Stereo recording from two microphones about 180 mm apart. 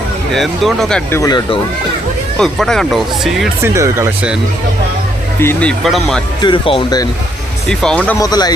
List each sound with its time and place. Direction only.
0.3 s speech: centre (ahead or behind)
1.2 s speech: 25° left (ahead or behind)
2.4 s speech: 5° left (ahead or behind)
3.6 s speech: 15° right (ahead or behind)
5.4 s speech: 10° left (ahead or behind)
6.4 s speech: 30° left (ahead or behind)
7.7 s speech: 5° left (ahead or behind)
8.2 s speech: 20° left (ahead or behind)